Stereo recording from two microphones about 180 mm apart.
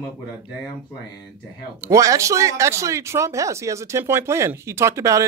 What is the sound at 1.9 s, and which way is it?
Speech, 15° right (ahead or behind).